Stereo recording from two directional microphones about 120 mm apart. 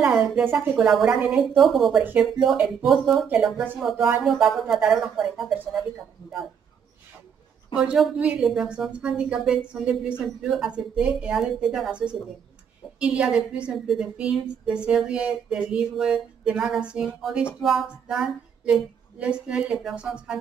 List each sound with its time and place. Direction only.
0.0 s a woman's voice: 10° right (ahead or behind)
7.7 s a woman's voice: 5° right (ahead or behind)